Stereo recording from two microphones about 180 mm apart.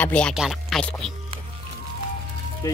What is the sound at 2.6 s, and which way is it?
Speech, 20° left (ahead or behind).